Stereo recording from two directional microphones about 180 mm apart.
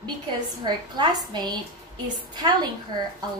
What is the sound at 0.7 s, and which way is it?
A woman's voice, 25° right (ahead or behind).